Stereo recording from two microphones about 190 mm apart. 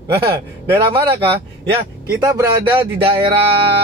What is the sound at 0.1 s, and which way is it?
Speech, 10° right (ahead or behind).